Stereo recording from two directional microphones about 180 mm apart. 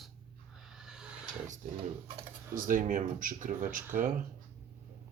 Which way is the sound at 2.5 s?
50° right (ahead or behind).